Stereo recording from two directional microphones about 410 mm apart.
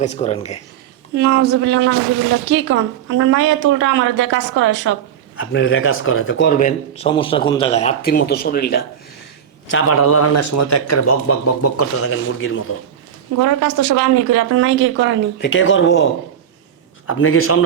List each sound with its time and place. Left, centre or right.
0.0 s speech: centre
1.1 s a woman's voice: right
5.4 s speech: left
13.4 s speech: right
15.4 s speech: left
17.1 s speech: left